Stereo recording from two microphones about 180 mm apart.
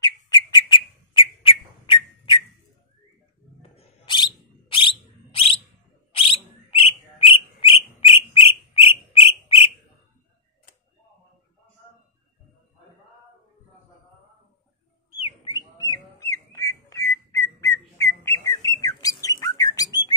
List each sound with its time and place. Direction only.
0.0 s bird: 25° left (ahead or behind)
3.7 s whistle: 25° left (ahead or behind)
6.1 s bird: 30° left (ahead or behind)
15.2 s a sound: 30° left (ahead or behind)
16.2 s whistling: 15° left (ahead or behind)
17.6 s bird: 20° left (ahead or behind)